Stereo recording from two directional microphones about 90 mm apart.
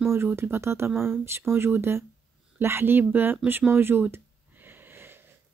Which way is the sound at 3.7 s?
25° right (ahead or behind).